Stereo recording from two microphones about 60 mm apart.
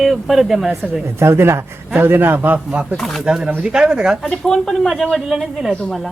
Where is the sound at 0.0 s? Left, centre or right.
Centre.